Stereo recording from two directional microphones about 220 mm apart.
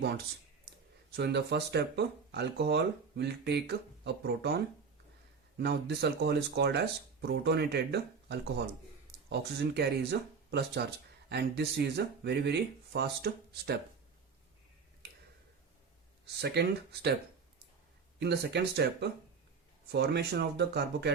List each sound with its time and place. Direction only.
1.1 s speech: 50° right (ahead or behind)
16.2 s speech: 50° right (ahead or behind)
18.2 s speech: 50° right (ahead or behind)